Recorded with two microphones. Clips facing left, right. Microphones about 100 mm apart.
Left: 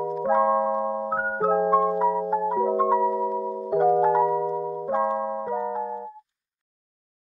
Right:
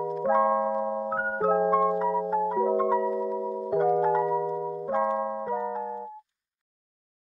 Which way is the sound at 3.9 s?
20° left (ahead or behind).